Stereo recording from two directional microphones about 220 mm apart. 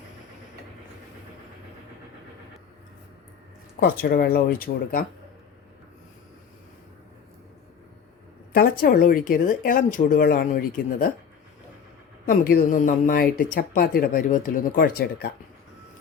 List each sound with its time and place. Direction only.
3.8 s speech: 45° left (ahead or behind)
8.5 s speech: 40° left (ahead or behind)
12.2 s speech: 40° left (ahead or behind)